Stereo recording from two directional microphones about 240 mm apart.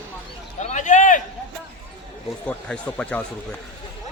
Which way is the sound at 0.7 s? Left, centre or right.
Left.